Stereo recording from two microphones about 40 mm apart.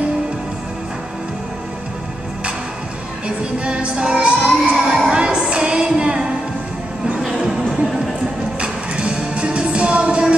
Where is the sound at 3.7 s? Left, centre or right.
Right.